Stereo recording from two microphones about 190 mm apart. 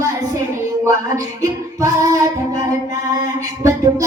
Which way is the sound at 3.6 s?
15° right (ahead or behind).